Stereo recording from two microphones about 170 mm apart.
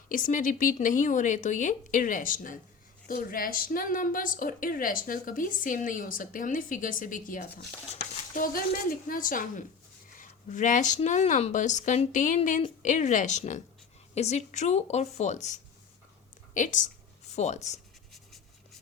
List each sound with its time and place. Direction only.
0.1 s a woman's voice: 50° left (ahead or behind)
18.1 s writing: centre (ahead or behind)